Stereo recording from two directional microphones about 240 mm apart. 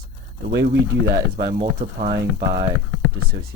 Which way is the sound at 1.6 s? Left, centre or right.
Right.